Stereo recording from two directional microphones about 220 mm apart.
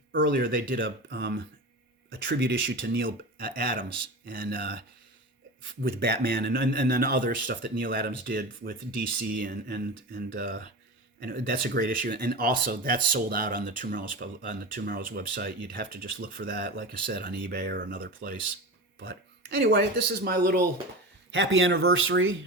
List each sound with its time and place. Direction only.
0.2 s speech: 45° right (ahead or behind)
5.8 s speech: 45° right (ahead or behind)
18.9 s speech: 50° right (ahead or behind)
21.3 s speech: 60° right (ahead or behind)